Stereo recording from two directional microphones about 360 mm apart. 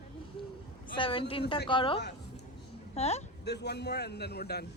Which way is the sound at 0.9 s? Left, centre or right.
Centre.